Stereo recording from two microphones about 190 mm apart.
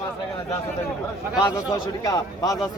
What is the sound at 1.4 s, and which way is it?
Speech, 20° left (ahead or behind).